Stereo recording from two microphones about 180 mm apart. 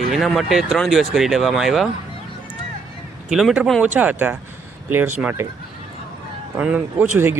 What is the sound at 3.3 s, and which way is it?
Speech, centre (ahead or behind).